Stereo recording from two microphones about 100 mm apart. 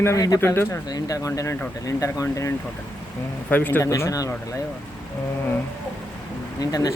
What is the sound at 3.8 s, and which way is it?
Speech, 35° left (ahead or behind).